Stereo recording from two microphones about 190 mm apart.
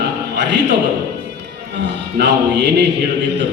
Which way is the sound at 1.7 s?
60° right (ahead or behind).